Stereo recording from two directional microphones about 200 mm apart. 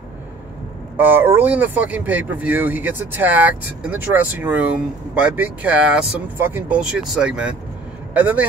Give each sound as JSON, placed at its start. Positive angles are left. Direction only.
{"t": 0.9, "sound": "speech", "side_deg": -10}